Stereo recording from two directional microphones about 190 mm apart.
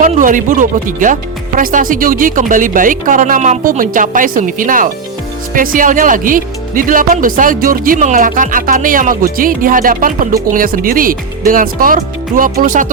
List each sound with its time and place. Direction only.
0.0 s speech: 45° right (ahead or behind)